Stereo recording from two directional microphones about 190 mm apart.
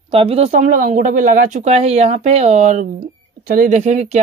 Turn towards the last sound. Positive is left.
turn(degrees=-35)  # may be behind; listen again after turning